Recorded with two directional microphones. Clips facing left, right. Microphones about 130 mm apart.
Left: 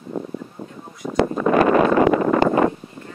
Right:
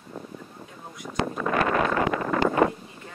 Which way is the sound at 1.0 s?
50° left (ahead or behind).